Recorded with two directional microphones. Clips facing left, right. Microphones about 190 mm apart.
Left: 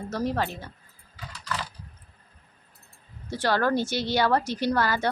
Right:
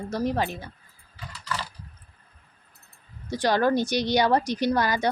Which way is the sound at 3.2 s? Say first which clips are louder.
Right 2 dB; 15° right (ahead or behind).